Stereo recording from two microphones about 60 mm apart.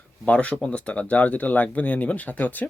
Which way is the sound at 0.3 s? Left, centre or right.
Left.